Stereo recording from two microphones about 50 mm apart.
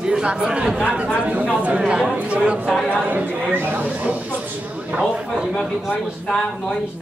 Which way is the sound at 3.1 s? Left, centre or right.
Right.